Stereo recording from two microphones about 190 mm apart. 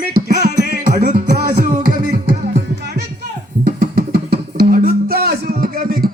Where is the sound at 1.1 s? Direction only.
40° right (ahead or behind).